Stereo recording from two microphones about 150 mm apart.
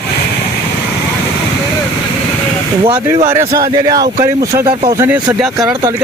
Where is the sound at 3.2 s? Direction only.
20° right (ahead or behind).